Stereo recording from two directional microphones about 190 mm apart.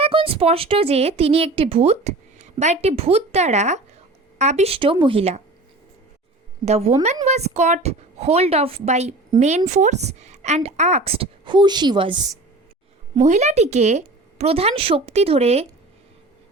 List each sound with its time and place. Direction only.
0.0 s a woman's voice: 30° right (ahead or behind)
6.7 s a woman's voice: 35° right (ahead or behind)
13.1 s a woman's voice: 35° right (ahead or behind)